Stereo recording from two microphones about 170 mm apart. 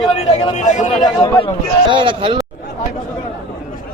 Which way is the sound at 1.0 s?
25° left (ahead or behind).